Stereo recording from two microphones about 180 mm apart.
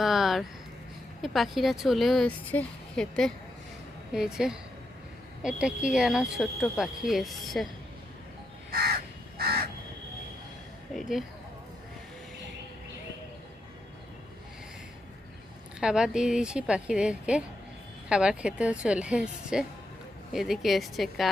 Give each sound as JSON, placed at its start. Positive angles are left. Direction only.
{"t": 0.0, "sound": "a sound", "side_deg": 0}
{"t": 1.2, "sound": "speech", "side_deg": 0}
{"t": 10.9, "sound": "speech", "side_deg": 0}
{"t": 15.8, "sound": "speech", "side_deg": -5}